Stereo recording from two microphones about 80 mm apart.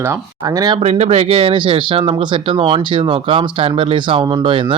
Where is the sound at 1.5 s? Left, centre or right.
Right.